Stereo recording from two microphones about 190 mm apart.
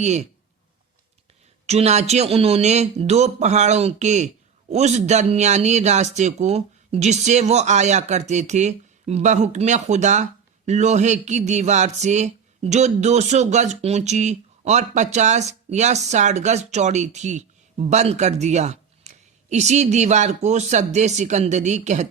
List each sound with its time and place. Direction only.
0.0 s speech: 35° right (ahead or behind)
1.6 s speech: 35° right (ahead or behind)